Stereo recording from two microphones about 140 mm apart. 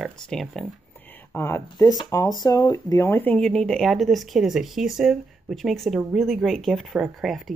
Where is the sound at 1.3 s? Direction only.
20° left (ahead or behind).